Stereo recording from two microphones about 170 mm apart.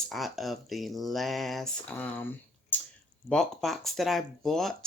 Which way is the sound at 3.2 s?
Centre (ahead or behind).